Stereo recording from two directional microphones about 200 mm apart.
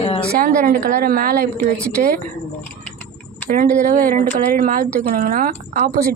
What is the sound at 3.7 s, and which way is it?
Speech, 40° right (ahead or behind).